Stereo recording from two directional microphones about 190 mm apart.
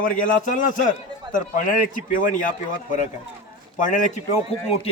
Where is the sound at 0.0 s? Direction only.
45° left (ahead or behind).